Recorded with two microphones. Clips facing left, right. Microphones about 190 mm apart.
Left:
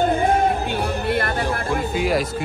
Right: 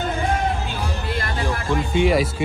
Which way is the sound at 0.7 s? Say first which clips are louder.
Left 5 dB; 60° left (ahead or behind).